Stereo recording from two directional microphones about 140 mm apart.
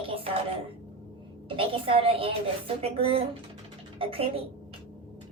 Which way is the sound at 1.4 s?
40° right (ahead or behind).